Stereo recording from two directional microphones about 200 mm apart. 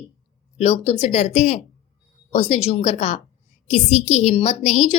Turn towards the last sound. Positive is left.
turn(degrees=35)  # may be behind; listen again after turning